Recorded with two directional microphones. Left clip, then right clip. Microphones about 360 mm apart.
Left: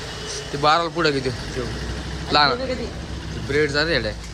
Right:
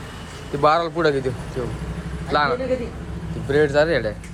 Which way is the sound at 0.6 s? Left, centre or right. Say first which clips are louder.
Right 1 dB; centre.